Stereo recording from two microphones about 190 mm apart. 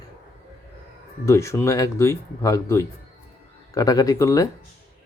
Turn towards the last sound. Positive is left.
turn(degrees=15)  # may be behind; listen again after turning